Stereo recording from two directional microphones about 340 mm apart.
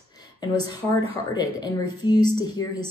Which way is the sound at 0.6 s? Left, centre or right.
Centre.